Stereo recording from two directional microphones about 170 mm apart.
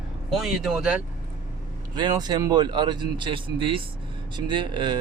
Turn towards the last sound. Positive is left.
turn(degrees=-25)  # may be behind; listen again after turning